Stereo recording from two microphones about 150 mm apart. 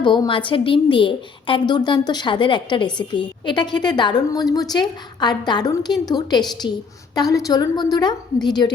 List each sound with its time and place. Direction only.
0.0 s a woman's voice: 30° left (ahead or behind)
7.2 s a woman's voice: 25° left (ahead or behind)